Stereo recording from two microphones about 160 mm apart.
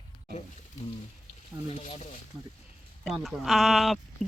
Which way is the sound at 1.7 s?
45° left (ahead or behind).